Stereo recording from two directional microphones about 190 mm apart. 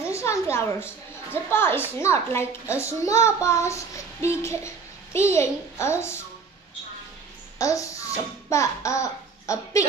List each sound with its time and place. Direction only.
0.1 s a woman's voice: 15° left (ahead or behind)
2.8 s child singing: 15° left (ahead or behind)
7.5 s speech: 15° left (ahead or behind)